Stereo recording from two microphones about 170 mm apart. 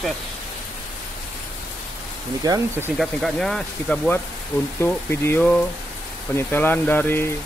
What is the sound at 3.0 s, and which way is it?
Speech, centre (ahead or behind).